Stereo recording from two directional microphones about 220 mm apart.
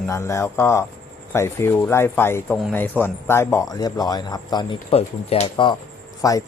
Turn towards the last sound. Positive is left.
turn(degrees=15)  # may be behind; listen again after turning